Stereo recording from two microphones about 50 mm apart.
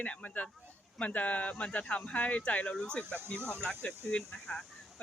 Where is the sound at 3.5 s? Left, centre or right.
Centre.